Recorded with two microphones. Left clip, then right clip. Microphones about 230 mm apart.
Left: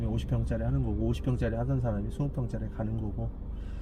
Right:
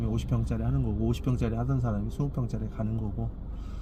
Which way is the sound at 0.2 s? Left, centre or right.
Right.